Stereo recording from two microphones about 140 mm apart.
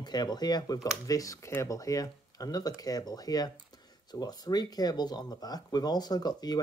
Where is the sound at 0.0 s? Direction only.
30° left (ahead or behind).